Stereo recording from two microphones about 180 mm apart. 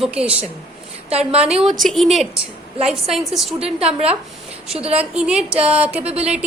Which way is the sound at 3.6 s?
35° right (ahead or behind).